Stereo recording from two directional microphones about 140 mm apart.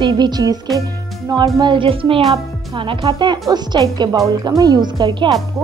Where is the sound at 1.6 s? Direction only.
35° right (ahead or behind).